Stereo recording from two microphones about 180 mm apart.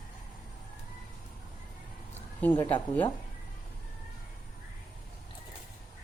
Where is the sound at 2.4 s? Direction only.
10° left (ahead or behind).